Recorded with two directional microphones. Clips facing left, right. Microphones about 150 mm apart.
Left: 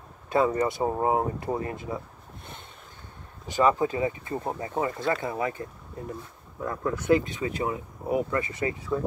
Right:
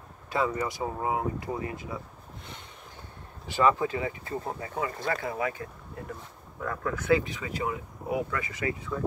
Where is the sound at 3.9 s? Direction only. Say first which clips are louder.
Left 4 dB; 20° left (ahead or behind).